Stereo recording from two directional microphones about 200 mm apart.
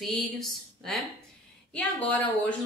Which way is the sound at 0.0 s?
Centre (ahead or behind).